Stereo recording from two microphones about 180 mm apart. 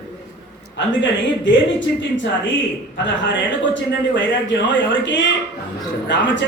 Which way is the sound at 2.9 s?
85° left.